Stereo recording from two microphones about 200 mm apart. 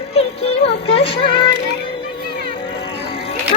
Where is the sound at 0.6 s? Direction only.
30° left (ahead or behind).